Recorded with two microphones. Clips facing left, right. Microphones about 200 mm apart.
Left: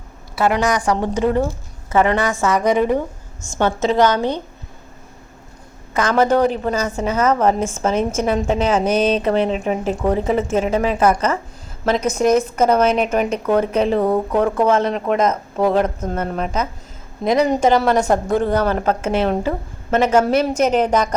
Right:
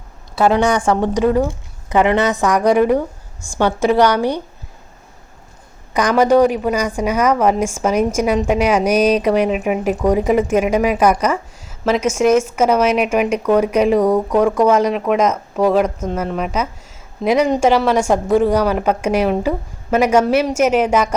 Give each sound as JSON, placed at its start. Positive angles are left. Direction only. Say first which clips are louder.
{"t": 0.8, "sound": "a woman's voice", "louder": "right 3 dB", "side_deg": -25}
{"t": 5.9, "sound": "a woman's voice", "louder": "right 3 dB", "side_deg": -15}
{"t": 14.0, "sound": "speech", "louder": "right 3 dB", "side_deg": 5}
{"t": 14.7, "sound": "a woman's voice", "louder": "right 2 dB", "side_deg": -10}
{"t": 15.5, "sound": "a woman's voice", "louder": "right 3 dB", "side_deg": 5}